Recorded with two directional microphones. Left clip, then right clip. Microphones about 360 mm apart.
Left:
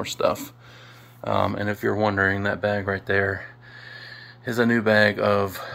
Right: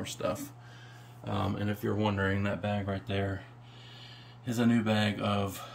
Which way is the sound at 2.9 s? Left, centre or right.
Centre.